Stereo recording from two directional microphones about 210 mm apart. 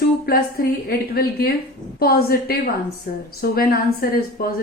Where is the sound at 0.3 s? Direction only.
45° left (ahead or behind).